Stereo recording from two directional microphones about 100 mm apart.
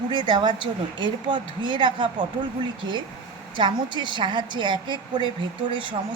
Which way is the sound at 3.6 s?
50° right (ahead or behind).